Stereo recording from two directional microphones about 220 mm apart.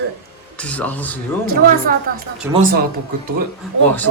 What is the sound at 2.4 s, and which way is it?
Speech, 10° right (ahead or behind).